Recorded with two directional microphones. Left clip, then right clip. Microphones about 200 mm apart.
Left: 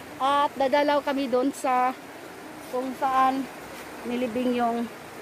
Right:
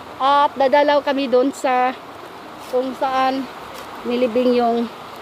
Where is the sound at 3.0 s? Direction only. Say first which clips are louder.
Even; 40° right (ahead or behind).